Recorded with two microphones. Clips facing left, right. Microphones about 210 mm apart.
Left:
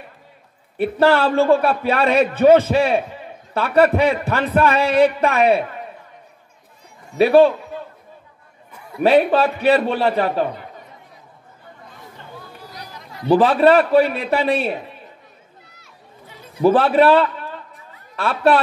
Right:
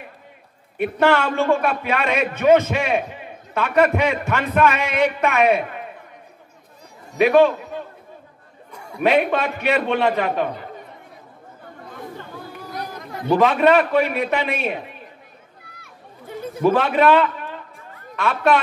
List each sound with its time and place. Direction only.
0.7 s a man's voice: 35° left (ahead or behind)
7.2 s a man's voice: 35° left (ahead or behind)
8.7 s a sound: centre (ahead or behind)
9.0 s a man's voice: 35° left (ahead or behind)
12.6 s chatter: 50° right (ahead or behind)
13.3 s a man's voice: 35° left (ahead or behind)
15.7 s a sound: 55° right (ahead or behind)
16.6 s a man's voice: 35° left (ahead or behind)